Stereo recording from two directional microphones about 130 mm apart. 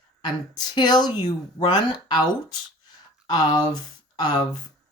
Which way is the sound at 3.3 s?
30° left (ahead or behind).